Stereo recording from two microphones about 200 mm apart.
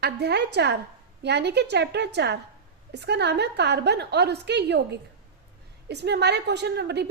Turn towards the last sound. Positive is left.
turn(degrees=-55)  # may be behind; listen again after turning